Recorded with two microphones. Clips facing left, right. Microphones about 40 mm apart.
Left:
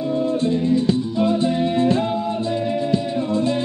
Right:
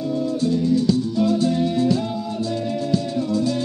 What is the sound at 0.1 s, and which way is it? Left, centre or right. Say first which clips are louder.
Music: left 1 dB; left.